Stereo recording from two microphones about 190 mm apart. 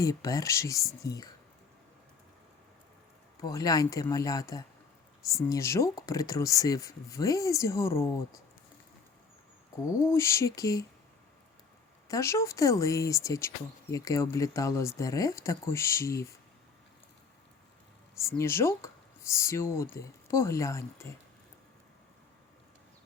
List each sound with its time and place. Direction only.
0.0 s speech: 20° left (ahead or behind)
3.4 s speech: 20° left (ahead or behind)
9.8 s speech: 15° left (ahead or behind)
12.0 s speech: 15° left (ahead or behind)
18.2 s speech: 15° left (ahead or behind)